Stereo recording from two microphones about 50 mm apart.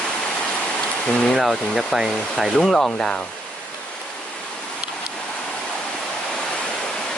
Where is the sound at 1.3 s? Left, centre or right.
Centre.